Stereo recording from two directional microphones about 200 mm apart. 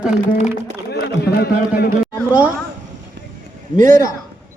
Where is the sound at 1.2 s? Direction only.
55° left (ahead or behind).